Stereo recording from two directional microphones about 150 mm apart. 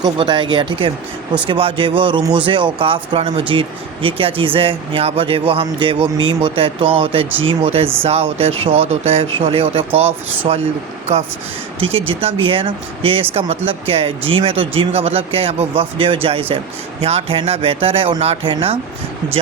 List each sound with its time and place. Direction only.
0.0 s speech: 35° right (ahead or behind)
11.1 s speech: 45° right (ahead or behind)